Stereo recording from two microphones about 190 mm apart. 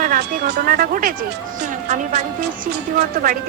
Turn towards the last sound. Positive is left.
turn(degrees=-45)  # may be behind; listen again after turning